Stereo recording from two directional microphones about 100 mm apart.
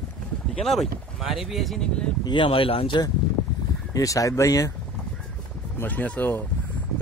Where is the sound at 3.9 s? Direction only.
35° left (ahead or behind).